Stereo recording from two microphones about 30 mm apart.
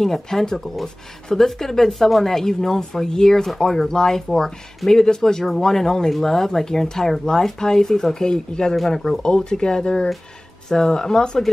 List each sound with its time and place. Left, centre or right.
0.0 s speech: centre
1.9 s speech: centre; by 8.7 s left
8.7 s speech: centre
9.2 s speech: left